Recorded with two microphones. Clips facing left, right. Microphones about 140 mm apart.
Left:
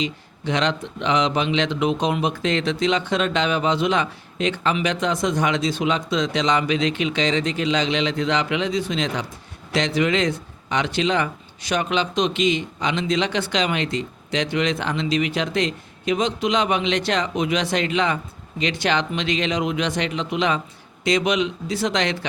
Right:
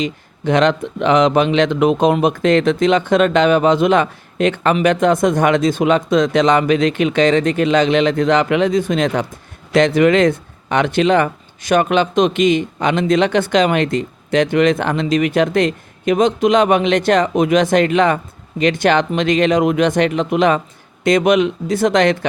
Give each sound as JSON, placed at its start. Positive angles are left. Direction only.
{"t": 0.0, "sound": "speech", "side_deg": -50}